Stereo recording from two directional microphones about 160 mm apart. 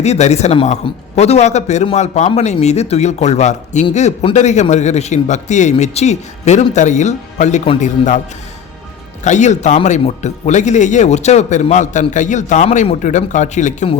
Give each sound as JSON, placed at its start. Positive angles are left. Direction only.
{"t": 0.0, "sound": "a man's voice", "side_deg": 45}
{"t": 9.2, "sound": "a man's voice", "side_deg": 50}